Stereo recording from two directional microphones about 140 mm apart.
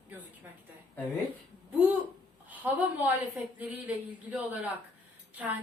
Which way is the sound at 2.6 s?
10° right (ahead or behind).